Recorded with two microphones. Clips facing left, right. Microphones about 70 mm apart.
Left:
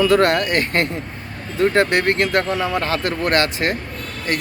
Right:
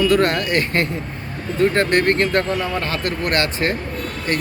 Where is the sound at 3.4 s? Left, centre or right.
Left.